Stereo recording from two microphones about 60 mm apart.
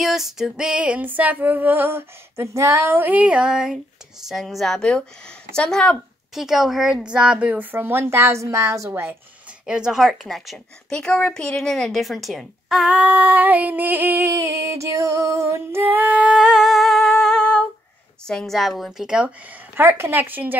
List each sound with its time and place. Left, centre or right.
0.0 s female singing: centre; by 3.0 s right
3.0 s speech: right; by 5.9 s centre
6.3 s a woman's voice: centre
7.5 s speech: right
9.7 s a woman's voice: centre
10.9 s speech: centre
12.9 s female singing: right
14.3 s music: right
15.8 s female singing: right
16.3 s humming: centre
18.2 s speech: centre
18.9 s a woman's voice: centre
19.7 s speech: right